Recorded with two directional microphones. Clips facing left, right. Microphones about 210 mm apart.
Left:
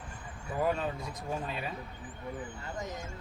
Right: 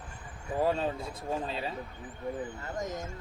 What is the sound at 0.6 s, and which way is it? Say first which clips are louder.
Speech: right 2 dB; 30° right (ahead or behind).